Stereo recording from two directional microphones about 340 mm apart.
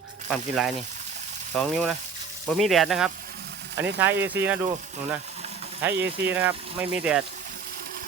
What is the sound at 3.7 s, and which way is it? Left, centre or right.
Speech, right.